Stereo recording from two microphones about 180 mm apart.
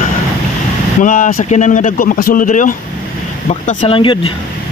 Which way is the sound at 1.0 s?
45° left (ahead or behind).